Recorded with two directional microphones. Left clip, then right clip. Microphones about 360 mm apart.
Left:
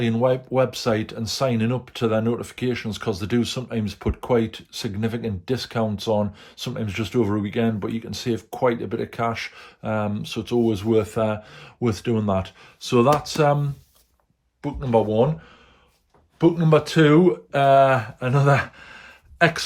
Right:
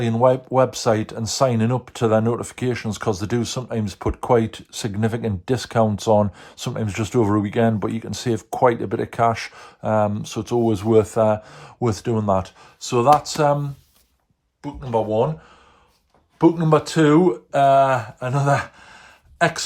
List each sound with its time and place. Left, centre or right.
0.0 s speech: centre
16.4 s speech: centre